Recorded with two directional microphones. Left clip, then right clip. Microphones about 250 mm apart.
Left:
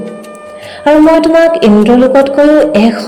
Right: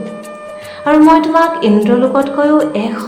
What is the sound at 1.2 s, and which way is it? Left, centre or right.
Music, left.